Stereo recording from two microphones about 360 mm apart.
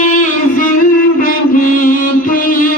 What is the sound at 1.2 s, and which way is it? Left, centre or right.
Mantra, left.